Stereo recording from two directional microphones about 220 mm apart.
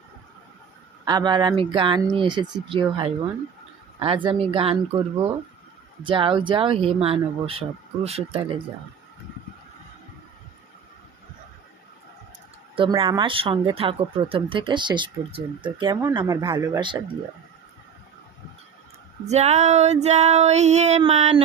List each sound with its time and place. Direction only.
1.0 s speech: 20° right (ahead or behind)
6.0 s speech: 25° right (ahead or behind)
12.7 s speech: 25° right (ahead or behind)
19.2 s female singing: 30° right (ahead or behind)